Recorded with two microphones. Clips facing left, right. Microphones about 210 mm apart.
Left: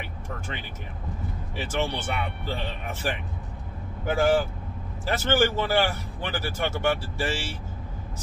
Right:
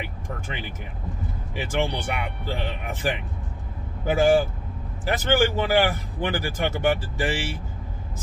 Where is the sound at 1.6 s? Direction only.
15° right (ahead or behind).